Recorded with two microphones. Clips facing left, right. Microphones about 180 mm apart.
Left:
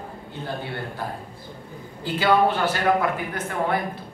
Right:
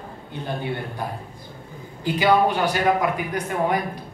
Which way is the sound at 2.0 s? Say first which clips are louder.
Right 1 dB; 15° right (ahead or behind).